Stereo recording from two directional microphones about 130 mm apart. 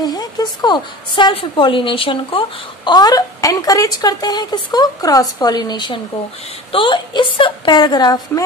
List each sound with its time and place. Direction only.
0.0 s a woman's voice: 30° left (ahead or behind)